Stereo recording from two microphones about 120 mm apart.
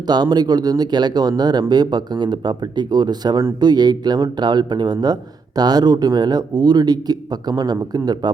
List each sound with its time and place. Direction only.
0.1 s speech: 35° right (ahead or behind)